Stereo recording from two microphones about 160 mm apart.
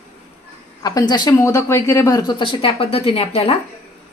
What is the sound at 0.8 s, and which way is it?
A woman's voice, 25° left (ahead or behind).